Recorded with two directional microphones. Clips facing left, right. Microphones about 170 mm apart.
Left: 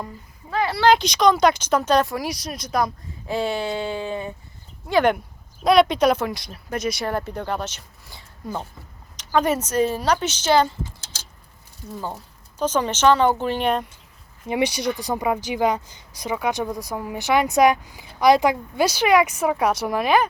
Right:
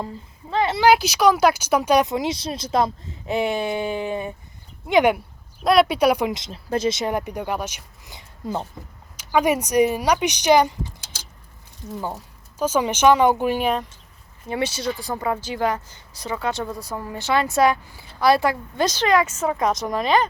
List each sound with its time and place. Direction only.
0.5 s speech: 20° right (ahead or behind)
0.9 s speech: 5° right (ahead or behind)
5.6 s speech: centre (ahead or behind)
14.4 s a woman's voice: 15° left (ahead or behind)